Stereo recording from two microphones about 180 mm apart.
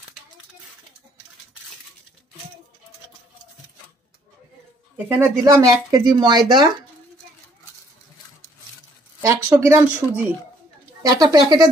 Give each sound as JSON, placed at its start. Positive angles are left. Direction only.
{"t": 4.9, "sound": "speech", "side_deg": -10}
{"t": 9.2, "sound": "speech", "side_deg": -15}